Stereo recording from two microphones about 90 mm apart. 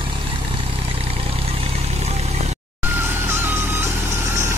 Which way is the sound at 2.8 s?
25° right (ahead or behind).